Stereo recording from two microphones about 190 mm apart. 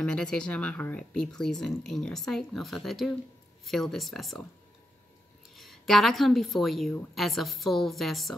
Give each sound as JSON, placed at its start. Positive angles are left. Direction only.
{"t": 0.0, "sound": "speech", "side_deg": 5}
{"t": 5.6, "sound": "speech", "side_deg": 0}